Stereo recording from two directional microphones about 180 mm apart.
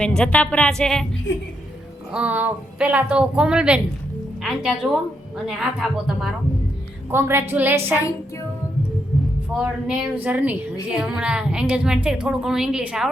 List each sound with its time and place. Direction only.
0.0 s a woman's voice: 5° left (ahead or behind)
1.3 s a woman's voice: 90° left
2.1 s a woman's voice: 10° right (ahead or behind)
7.1 s speech: 15° right (ahead or behind)
9.6 s a woman's voice: 5° right (ahead or behind)